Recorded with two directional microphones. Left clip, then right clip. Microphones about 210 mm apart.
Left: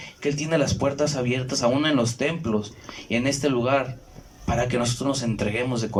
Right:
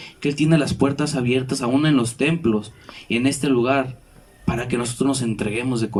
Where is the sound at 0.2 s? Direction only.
50° right (ahead or behind).